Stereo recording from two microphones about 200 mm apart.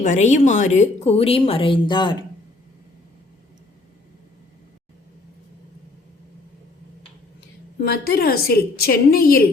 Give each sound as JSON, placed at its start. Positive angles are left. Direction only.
{"t": 0.0, "sound": "a woman's voice", "side_deg": 35}
{"t": 7.8, "sound": "a woman's voice", "side_deg": 50}